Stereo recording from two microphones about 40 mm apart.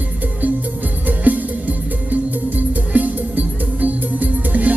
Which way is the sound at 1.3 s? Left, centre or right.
Right.